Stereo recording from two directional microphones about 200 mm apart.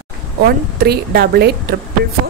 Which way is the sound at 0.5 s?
50° right (ahead or behind).